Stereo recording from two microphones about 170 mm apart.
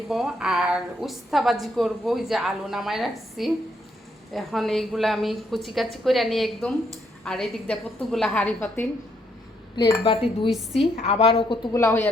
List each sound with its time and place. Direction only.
0.1 s a woman's voice: 5° right (ahead or behind)
9.7 s speech: 25° left (ahead or behind)
10.5 s a woman's voice: centre (ahead or behind)
10.9 s speech: 35° left (ahead or behind); by 12.0 s 15° left (ahead or behind)